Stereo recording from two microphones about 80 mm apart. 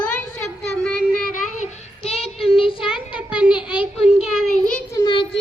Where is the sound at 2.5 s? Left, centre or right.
Left.